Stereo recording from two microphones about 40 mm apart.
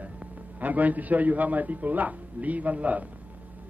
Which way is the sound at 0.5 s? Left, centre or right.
Right.